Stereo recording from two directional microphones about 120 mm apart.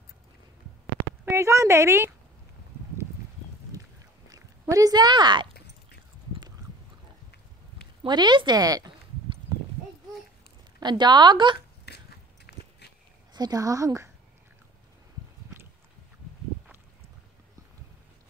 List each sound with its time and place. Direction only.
1.2 s a woman's voice: 25° right (ahead or behind)
4.3 s speech: 25° right (ahead or behind)
8.0 s speech: 40° right (ahead or behind)
9.5 s horse: 40° right (ahead or behind)
10.8 s speech: 40° right (ahead or behind)
13.3 s a woman's voice: 35° right (ahead or behind)